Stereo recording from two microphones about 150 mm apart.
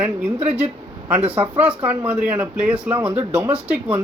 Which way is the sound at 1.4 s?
10° right (ahead or behind).